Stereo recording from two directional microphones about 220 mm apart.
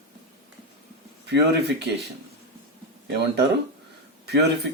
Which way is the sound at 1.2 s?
50° right (ahead or behind).